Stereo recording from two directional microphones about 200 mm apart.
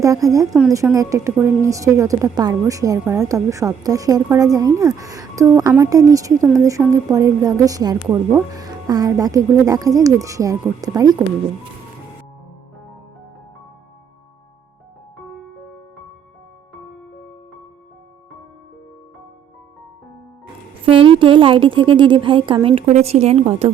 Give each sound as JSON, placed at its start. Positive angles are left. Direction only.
{"t": 0.0, "sound": "a woman's voice", "side_deg": -15}
{"t": 8.0, "sound": "a woman's voice", "side_deg": -10}
{"t": 20.8, "sound": "a woman's voice", "side_deg": -25}